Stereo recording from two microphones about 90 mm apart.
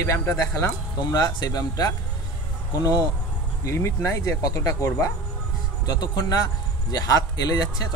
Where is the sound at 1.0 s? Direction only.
50° left (ahead or behind).